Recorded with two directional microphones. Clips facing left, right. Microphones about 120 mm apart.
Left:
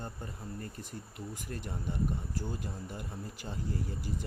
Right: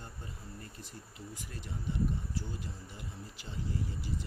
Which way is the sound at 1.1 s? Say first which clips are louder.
Left 5 dB; 50° left (ahead or behind).